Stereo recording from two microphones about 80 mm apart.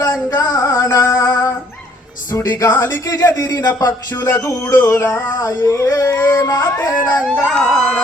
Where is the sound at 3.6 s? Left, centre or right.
Left.